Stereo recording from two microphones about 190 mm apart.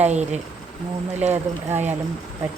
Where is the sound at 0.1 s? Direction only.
35° right (ahead or behind).